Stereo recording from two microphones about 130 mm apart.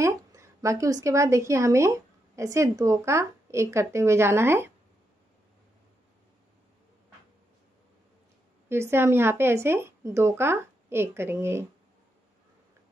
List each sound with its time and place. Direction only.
0.0 s a woman's voice: 25° right (ahead or behind)
8.6 s speech: 20° right (ahead or behind)